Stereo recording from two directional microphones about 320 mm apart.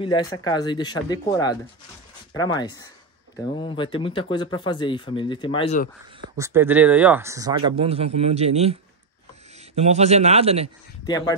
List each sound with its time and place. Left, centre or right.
0.0 s speech: centre
6.3 s speech: centre
9.8 s a man's voice: centre
11.1 s speech: centre